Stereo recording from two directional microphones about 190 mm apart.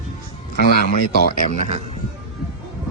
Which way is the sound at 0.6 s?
55° left (ahead or behind).